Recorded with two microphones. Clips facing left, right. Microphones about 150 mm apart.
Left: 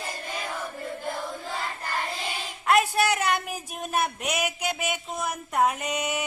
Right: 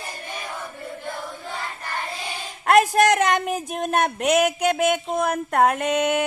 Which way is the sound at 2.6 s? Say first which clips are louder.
Right 6 dB; 55° right (ahead or behind).